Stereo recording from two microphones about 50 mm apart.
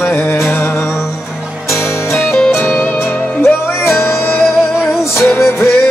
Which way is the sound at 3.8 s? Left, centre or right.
Left.